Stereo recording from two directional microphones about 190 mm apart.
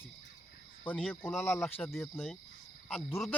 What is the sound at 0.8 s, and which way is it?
Speech, 10° left (ahead or behind).